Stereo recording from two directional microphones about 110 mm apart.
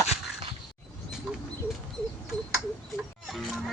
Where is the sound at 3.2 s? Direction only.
Centre (ahead or behind).